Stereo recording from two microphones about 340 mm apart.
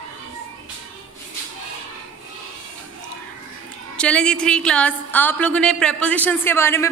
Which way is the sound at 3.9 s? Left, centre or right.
Centre.